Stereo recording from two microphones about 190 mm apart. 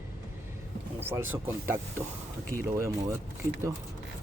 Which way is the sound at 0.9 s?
10° right (ahead or behind).